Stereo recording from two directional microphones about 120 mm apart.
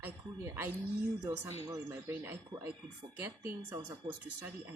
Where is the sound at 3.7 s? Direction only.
30° right (ahead or behind).